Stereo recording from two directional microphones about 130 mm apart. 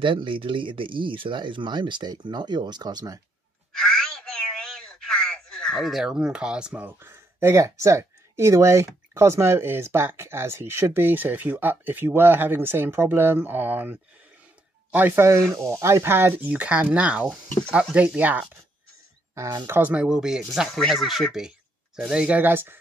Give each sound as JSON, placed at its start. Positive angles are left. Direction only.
{"t": 0.0, "sound": "speech", "side_deg": -40}
{"t": 3.7, "sound": "speech", "side_deg": 5}
{"t": 19.3, "sound": "speech", "side_deg": -20}